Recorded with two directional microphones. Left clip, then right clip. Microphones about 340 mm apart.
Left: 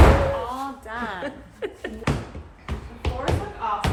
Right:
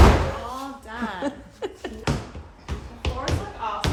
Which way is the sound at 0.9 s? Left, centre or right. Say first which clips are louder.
Right 4 dB; centre.